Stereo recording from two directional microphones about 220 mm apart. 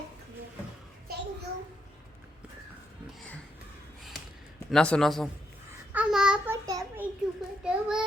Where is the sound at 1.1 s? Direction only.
45° right (ahead or behind).